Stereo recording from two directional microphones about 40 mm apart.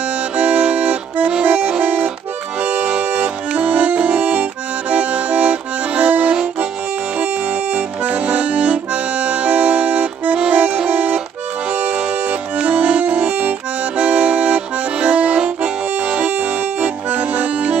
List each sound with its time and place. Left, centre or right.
0.4 s accordion: right
7.7 s accordion: right
12.5 s accordion: right